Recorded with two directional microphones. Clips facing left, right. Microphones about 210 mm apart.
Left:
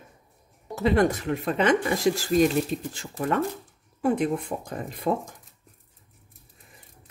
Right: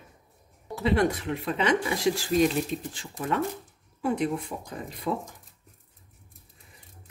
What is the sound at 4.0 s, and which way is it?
Speech, 50° left (ahead or behind).